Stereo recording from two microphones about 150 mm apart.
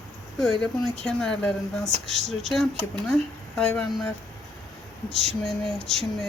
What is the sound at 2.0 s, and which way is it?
Speech, 50° right (ahead or behind).